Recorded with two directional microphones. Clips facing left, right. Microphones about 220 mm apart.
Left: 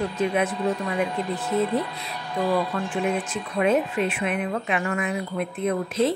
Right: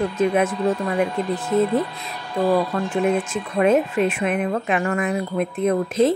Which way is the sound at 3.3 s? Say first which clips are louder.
Right 4 dB; 45° right (ahead or behind).